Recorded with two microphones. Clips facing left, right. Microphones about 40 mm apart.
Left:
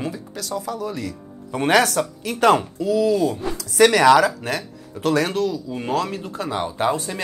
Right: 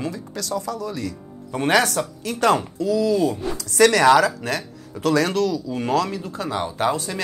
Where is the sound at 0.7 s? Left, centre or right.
Left.